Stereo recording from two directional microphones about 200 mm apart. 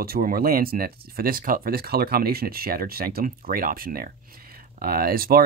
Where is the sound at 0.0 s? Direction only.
50° right (ahead or behind).